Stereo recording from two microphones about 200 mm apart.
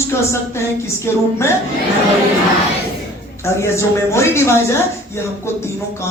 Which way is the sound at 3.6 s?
15° left (ahead or behind).